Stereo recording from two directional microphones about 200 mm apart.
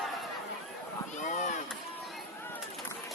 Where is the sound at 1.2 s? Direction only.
35° left (ahead or behind).